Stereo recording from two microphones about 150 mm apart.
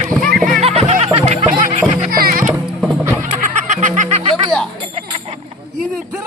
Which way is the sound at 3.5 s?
55° right (ahead or behind).